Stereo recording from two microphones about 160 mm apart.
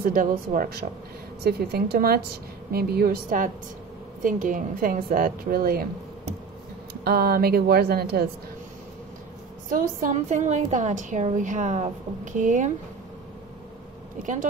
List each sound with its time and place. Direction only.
0.0 s a woman's voice: 65° right (ahead or behind)
1.4 s a woman's voice: 85° right; by 5.9 s 65° right (ahead or behind)
6.9 s speech: 75° right (ahead or behind)
9.7 s a woman's voice: 55° right (ahead or behind)
14.2 s a woman's voice: 55° right (ahead or behind)